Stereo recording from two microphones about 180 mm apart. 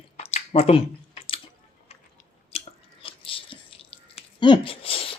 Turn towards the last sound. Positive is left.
turn(degrees=30)  # may be behind; listen again after turning